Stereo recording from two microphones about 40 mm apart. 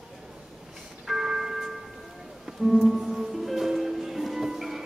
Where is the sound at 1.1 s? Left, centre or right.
Centre.